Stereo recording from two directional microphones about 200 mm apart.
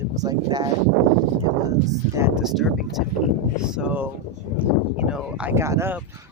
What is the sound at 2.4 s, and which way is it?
Speech, centre (ahead or behind).